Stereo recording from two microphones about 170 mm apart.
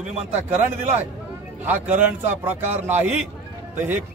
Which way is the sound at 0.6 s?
40° right (ahead or behind).